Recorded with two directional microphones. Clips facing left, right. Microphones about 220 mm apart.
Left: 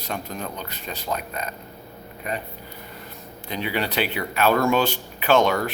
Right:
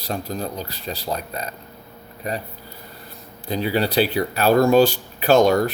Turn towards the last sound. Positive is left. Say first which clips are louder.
# right 4 dB
turn(degrees=-40)  # may be behind; listen again after turning